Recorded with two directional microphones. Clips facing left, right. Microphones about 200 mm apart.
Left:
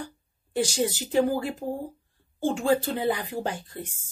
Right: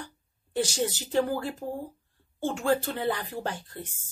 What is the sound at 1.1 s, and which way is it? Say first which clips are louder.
Speech: left 3 dB; 15° left (ahead or behind).